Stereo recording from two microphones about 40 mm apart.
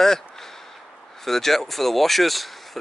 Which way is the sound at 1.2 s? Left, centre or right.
Centre.